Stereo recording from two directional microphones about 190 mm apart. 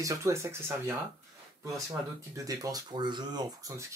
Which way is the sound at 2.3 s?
20° right (ahead or behind).